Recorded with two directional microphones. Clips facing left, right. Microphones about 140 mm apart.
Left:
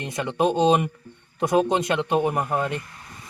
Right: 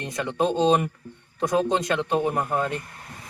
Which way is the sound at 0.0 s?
20° left (ahead or behind).